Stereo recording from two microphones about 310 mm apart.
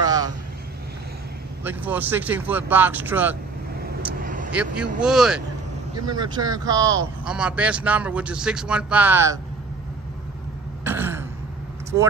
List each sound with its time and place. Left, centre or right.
0.0 s vehicle: centre
1.6 s speech: centre
4.2 s vehicle: right
4.7 s speech: centre
6.0 s speech: centre
10.8 s throat clearing: centre